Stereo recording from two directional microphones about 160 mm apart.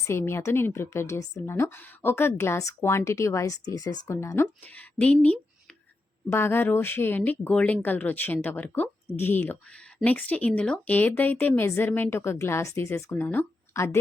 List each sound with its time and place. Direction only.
0.0 s a woman's voice: 15° left (ahead or behind)